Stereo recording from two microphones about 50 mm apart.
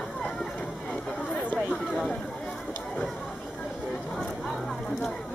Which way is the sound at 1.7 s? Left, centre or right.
Centre.